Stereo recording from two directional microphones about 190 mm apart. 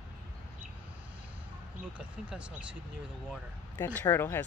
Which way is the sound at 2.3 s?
5° right (ahead or behind).